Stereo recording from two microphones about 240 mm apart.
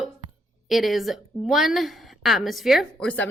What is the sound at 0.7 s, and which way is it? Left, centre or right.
A woman's voice, centre.